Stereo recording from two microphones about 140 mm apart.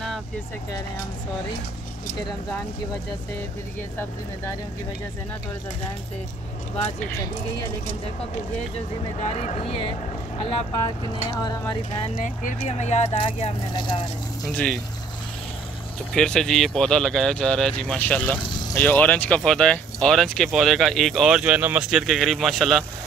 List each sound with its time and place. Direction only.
9.2 s speech: 55° left (ahead or behind)
11.2 s speech: 30° left (ahead or behind)
12.2 s speech: 60° left (ahead or behind)
13.7 s speech: 35° left (ahead or behind)
14.4 s speech: 10° left (ahead or behind)
16.1 s speech: 5° left (ahead or behind)